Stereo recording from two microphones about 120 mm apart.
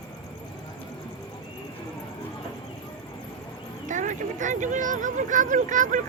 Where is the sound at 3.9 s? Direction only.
90° right.